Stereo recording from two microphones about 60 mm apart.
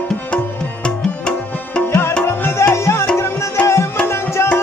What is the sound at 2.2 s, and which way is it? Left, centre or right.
Music, left.